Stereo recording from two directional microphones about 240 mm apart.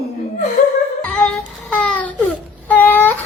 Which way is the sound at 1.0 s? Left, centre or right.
Centre.